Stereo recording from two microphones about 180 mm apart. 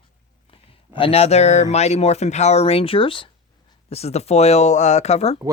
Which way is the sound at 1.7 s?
35° left (ahead or behind).